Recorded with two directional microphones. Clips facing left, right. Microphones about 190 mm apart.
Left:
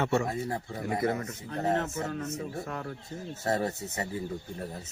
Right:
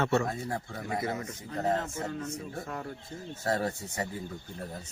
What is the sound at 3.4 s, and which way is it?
Speech, 20° left (ahead or behind).